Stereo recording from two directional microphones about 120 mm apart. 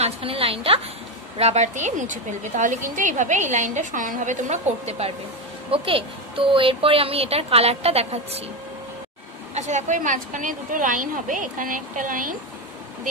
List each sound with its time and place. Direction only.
0.0 s a woman's voice: 50° right (ahead or behind)
1.4 s a woman's voice: 70° right (ahead or behind)
5.7 s a woman's voice: 50° right (ahead or behind)
9.5 s a woman's voice: 70° right (ahead or behind); by 12.1 s 90° right